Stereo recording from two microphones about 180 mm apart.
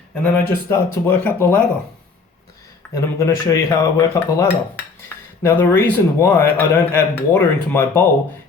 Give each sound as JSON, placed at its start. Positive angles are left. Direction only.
{"t": 0.1, "sound": "speech", "side_deg": 10}
{"t": 2.9, "sound": "speech", "side_deg": 15}